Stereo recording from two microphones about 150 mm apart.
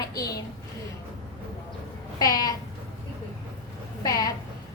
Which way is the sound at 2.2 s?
25° left (ahead or behind).